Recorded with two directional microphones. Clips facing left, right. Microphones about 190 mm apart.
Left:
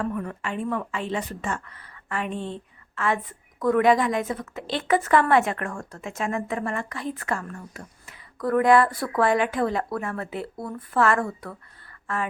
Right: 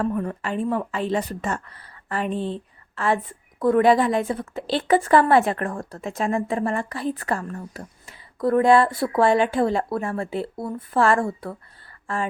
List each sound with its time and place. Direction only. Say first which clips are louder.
0.0 s a woman's voice: right 4 dB; 30° right (ahead or behind)